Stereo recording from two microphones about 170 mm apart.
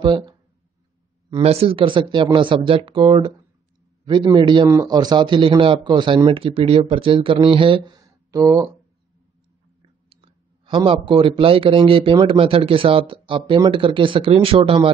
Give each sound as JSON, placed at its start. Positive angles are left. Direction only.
{"t": 0.0, "sound": "speech", "side_deg": -25}
{"t": 1.4, "sound": "a man's voice", "side_deg": -35}
{"t": 9.8, "sound": "clicking", "side_deg": -30}
{"t": 10.9, "sound": "speech", "side_deg": -30}